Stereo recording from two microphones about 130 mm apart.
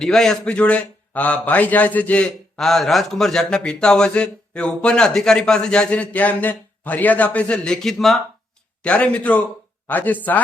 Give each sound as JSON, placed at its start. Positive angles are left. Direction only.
{"t": 0.0, "sound": "a man's voice", "side_deg": 5}